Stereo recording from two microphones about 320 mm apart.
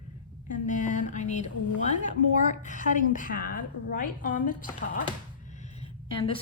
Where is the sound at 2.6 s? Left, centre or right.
Left.